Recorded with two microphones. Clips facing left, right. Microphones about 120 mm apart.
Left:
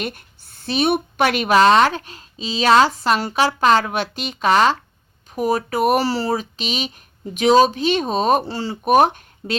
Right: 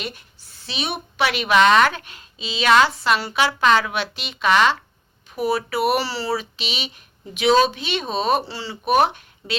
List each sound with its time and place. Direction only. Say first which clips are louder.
0.0 s a woman's voice: left 5 dB; 50° left (ahead or behind)